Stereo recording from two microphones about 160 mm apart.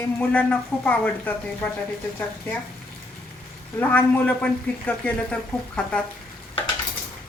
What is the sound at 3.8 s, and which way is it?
Speech, 10° left (ahead or behind).